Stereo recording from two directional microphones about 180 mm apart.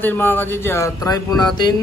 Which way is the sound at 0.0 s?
10° left (ahead or behind).